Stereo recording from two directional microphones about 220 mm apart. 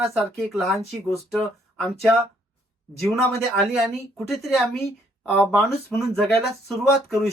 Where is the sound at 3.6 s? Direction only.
Centre (ahead or behind).